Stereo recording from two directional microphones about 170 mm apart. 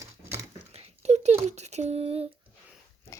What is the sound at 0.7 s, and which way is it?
Speech, 40° right (ahead or behind).